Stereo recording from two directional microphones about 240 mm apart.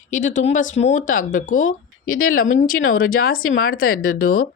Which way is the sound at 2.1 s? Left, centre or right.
Left.